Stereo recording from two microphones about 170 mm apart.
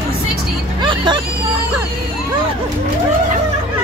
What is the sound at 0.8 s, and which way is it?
Speech, 25° right (ahead or behind).